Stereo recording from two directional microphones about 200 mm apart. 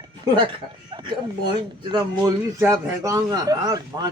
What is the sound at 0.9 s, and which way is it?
Bow-wow, 25° right (ahead or behind).